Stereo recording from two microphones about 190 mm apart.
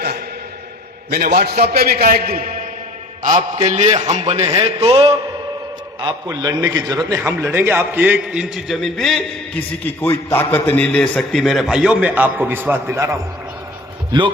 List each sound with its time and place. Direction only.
1.1 s a man's voice: 55° right (ahead or behind)
3.2 s a sound: 40° right (ahead or behind)
3.9 s a man's voice: 30° right (ahead or behind); by 13.1 s 15° right (ahead or behind)
14.1 s a man's voice: 25° right (ahead or behind)